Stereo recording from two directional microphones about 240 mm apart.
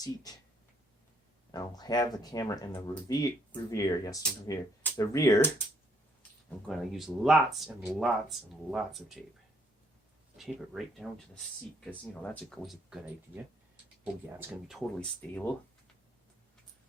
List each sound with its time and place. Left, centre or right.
0.0 s speech: centre
1.5 s speech: centre
6.7 s speech: centre
10.3 s speech: centre